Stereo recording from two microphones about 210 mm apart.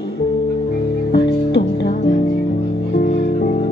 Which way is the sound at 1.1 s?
50° left (ahead or behind).